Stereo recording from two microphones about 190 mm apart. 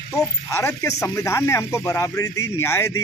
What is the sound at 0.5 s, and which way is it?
A man's voice, 15° left (ahead or behind).